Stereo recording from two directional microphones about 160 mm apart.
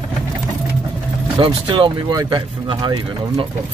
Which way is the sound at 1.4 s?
35° right (ahead or behind).